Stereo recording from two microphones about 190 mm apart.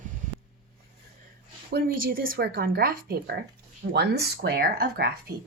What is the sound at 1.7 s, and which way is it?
Speech, 55° right (ahead or behind).